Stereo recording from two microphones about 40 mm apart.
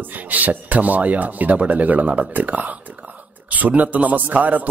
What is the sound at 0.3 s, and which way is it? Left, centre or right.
A man's voice, right.